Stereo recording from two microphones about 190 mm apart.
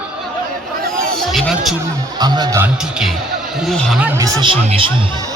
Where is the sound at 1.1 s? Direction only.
Centre (ahead or behind).